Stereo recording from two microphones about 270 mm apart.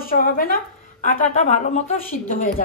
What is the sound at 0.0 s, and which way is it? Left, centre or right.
A woman's voice, left.